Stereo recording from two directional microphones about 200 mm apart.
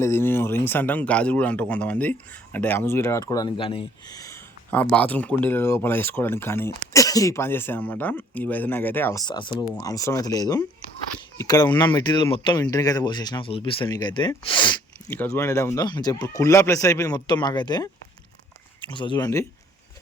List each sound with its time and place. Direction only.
0.0 s speech: 10° left (ahead or behind)
15.1 s speech: 10° left (ahead or behind)
18.9 s speech: 25° left (ahead or behind)